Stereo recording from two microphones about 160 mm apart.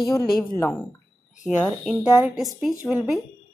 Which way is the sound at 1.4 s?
5° left (ahead or behind).